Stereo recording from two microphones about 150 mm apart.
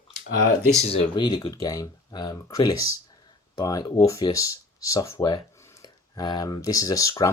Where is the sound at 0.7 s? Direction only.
45° left (ahead or behind).